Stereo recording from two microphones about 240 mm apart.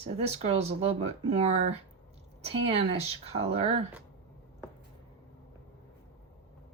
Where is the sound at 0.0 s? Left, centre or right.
Right.